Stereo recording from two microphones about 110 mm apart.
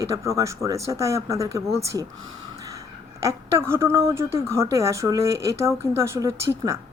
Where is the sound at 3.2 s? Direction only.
25° right (ahead or behind).